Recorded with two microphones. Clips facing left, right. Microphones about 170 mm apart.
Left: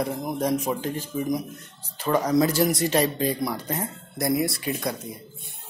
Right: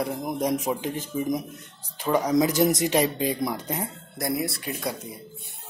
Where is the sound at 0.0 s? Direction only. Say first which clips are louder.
Left 1 dB; 10° right (ahead or behind).